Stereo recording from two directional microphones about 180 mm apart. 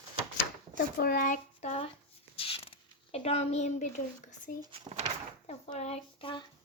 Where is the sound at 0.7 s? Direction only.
55° left (ahead or behind); by 1.8 s 40° left (ahead or behind).